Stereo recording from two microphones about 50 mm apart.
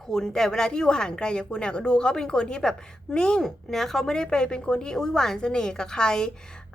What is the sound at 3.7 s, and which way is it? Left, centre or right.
A woman's voice, centre.